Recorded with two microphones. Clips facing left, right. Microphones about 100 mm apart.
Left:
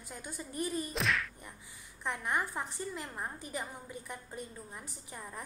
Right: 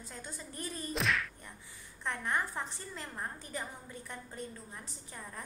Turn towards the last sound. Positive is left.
turn(degrees=10)  # may be behind; listen again after turning